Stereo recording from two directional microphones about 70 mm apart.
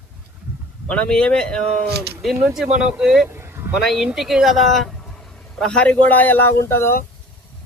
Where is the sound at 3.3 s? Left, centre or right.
Right.